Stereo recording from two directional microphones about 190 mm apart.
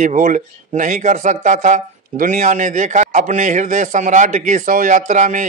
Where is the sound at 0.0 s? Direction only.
45° right (ahead or behind).